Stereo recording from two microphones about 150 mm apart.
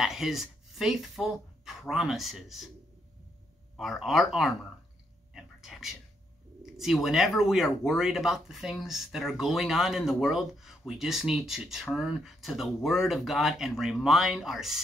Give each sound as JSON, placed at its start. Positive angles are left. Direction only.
{"t": 0.0, "sound": "speech", "side_deg": 0}
{"t": 3.7, "sound": "speech", "side_deg": 0}
{"t": 5.3, "sound": "a sound", "side_deg": 0}
{"t": 6.6, "sound": "speech", "side_deg": 0}